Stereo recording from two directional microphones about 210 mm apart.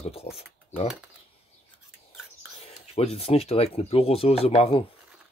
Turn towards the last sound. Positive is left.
turn(degrees=30)  # may be behind; listen again after turning